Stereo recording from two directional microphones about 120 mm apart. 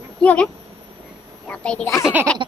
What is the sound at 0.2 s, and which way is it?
Speech, 10° left (ahead or behind).